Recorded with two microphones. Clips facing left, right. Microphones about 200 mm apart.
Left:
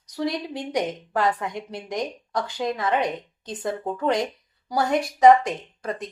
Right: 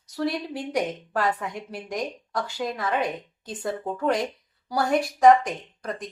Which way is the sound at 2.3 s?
20° left (ahead or behind).